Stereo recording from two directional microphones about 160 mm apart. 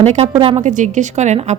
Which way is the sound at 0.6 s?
50° right (ahead or behind).